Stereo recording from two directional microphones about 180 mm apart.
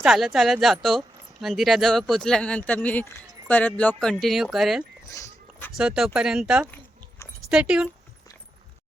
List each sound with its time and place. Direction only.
0.0 s speech: centre (ahead or behind)
5.0 s dog: 15° left (ahead or behind)
5.7 s speech: 5° right (ahead or behind)